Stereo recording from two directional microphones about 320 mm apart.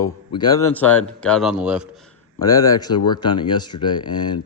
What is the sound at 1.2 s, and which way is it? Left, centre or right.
Speech, centre.